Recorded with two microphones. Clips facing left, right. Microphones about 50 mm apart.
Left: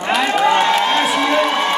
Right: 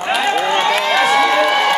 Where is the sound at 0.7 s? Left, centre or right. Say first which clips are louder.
Right 2 dB; right.